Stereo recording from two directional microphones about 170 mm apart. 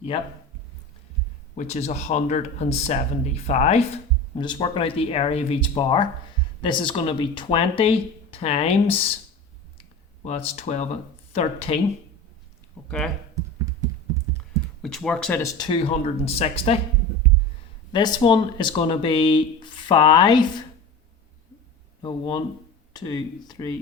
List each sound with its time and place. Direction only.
1.5 s speech: 40° left (ahead or behind)
10.2 s speech: 35° left (ahead or behind)
12.8 s a sound: 10° left (ahead or behind)
14.8 s speech: 5° left (ahead or behind)
15.4 s speech: 20° left (ahead or behind)
15.9 s speech: 35° left (ahead or behind)
17.9 s speech: 25° left (ahead or behind)
22.0 s speech: 25° left (ahead or behind)